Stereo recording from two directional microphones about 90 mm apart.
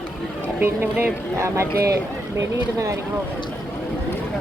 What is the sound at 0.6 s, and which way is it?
Speech, 20° right (ahead or behind).